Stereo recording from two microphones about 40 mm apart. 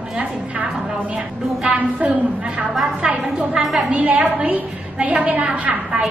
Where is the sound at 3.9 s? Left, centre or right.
Right.